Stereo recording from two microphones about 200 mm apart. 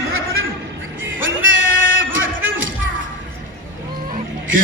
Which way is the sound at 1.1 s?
70° right (ahead or behind).